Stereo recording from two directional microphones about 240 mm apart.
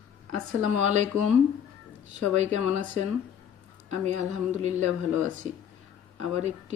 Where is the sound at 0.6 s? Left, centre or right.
Right.